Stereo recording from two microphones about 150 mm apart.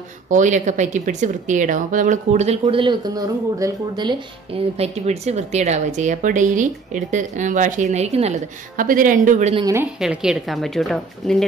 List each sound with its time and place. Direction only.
0.3 s speech: 55° right (ahead or behind)
2.6 s speech: 35° right (ahead or behind)
4.7 s speech: 45° right (ahead or behind)
8.7 s speech: 65° right (ahead or behind)
9.9 s a woman's voice: 5° right (ahead or behind)